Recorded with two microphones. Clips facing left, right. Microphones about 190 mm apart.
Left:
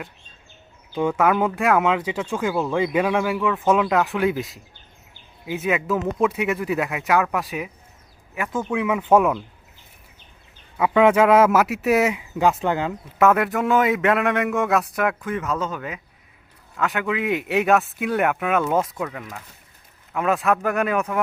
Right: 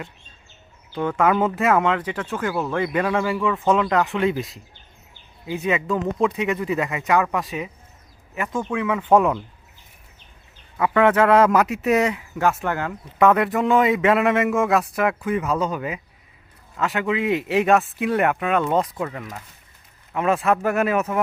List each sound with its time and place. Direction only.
0.9 s speech: 10° left (ahead or behind)
10.8 s speech: 10° left (ahead or behind)
12.1 s speech: 15° left (ahead or behind)
13.1 s speech: 5° left (ahead or behind)